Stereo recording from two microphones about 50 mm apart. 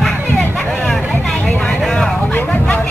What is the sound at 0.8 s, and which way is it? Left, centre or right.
Vehicle, centre.